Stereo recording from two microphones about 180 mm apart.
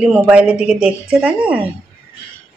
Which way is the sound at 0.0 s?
5° right (ahead or behind).